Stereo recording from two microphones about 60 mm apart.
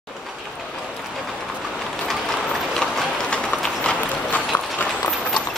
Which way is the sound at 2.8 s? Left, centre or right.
Centre.